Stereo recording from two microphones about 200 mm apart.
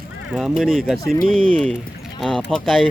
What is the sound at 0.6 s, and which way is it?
Speech, centre (ahead or behind).